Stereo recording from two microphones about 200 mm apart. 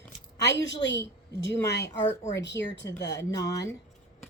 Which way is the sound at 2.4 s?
60° left (ahead or behind).